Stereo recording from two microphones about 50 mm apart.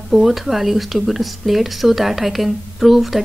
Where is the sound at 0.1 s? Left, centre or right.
Centre.